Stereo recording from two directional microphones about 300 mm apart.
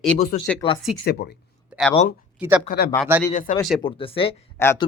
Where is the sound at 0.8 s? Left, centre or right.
Centre.